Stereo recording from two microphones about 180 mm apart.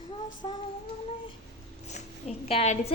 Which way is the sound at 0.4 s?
30° left (ahead or behind).